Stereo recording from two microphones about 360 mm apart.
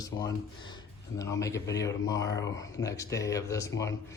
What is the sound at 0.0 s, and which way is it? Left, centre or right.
Speech, centre.